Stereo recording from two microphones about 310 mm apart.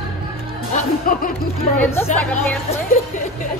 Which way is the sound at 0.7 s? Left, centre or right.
Left.